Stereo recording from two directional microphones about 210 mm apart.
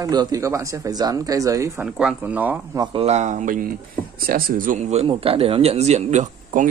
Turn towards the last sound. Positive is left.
turn(degrees=-35)  # may be behind; listen again after turning